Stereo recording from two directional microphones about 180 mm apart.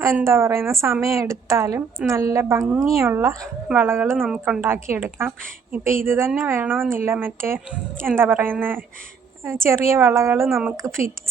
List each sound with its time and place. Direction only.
0.2 s a woman's voice: 15° right (ahead or behind)
4.2 s speech: centre (ahead or behind)
4.6 s a woman's voice: 15° right (ahead or behind)